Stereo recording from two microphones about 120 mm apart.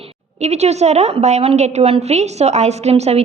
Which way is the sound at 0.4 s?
65° right (ahead or behind).